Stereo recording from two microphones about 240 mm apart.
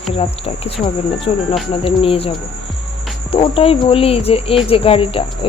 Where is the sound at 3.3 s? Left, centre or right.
Left.